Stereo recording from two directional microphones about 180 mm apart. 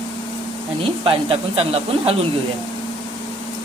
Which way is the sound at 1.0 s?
35° right (ahead or behind).